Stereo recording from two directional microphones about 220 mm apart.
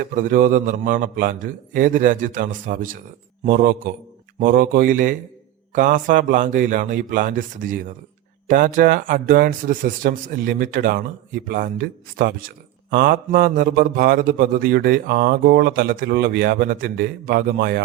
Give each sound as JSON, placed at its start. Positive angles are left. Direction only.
{"t": 0.1, "sound": "speech", "side_deg": -40}